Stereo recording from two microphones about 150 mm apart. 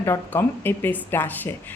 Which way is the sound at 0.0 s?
15° left (ahead or behind).